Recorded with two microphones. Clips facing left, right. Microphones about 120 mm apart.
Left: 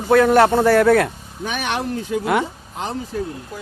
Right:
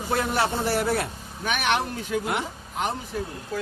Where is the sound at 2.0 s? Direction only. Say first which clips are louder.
Left 7 dB; 90° left.